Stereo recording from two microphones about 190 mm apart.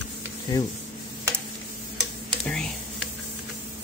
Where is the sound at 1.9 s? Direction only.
5° left (ahead or behind).